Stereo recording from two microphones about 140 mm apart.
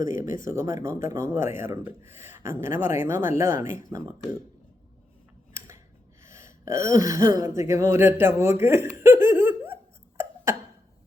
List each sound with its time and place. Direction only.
0.0 s speech: 70° left (ahead or behind)
0.4 s speech: 20° right (ahead or behind)
5.5 s scissors: 20° right (ahead or behind)
6.2 s gasp: 20° right (ahead or behind)
6.8 s speech: 25° right (ahead or behind)